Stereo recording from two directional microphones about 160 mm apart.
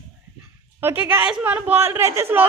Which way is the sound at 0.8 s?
10° right (ahead or behind).